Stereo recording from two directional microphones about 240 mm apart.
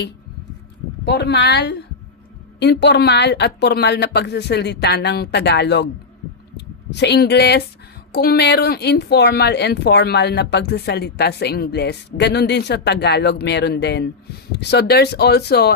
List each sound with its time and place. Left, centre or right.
1.0 s speech: left
6.9 s speech: left